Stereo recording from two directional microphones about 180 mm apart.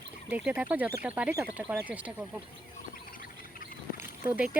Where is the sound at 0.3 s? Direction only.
10° right (ahead or behind).